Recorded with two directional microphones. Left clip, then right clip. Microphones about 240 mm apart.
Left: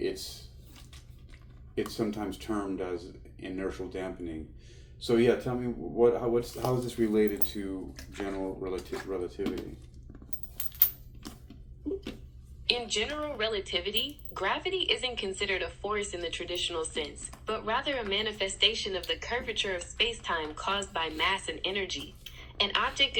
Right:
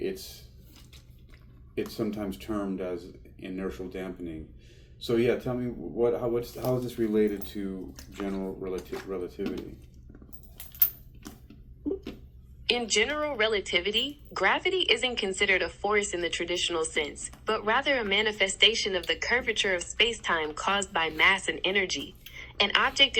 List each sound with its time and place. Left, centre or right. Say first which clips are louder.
1.7 s speech: even; centre
12.6 s a woman's voice: right 4 dB; right